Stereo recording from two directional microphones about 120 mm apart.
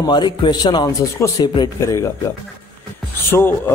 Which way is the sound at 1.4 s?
40° left (ahead or behind).